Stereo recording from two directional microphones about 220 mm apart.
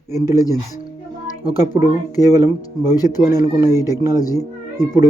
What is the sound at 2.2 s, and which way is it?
Speech, 15° left (ahead or behind).